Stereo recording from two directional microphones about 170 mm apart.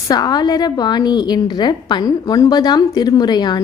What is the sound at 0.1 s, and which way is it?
A woman's voice, 25° left (ahead or behind).